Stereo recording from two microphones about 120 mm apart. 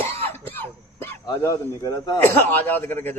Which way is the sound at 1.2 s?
25° left (ahead or behind).